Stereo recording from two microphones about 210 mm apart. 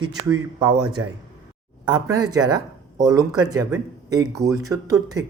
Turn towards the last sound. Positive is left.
turn(degrees=-15)  # may be behind; listen again after turning